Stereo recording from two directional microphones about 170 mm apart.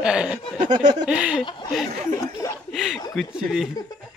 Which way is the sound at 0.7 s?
45° right (ahead or behind).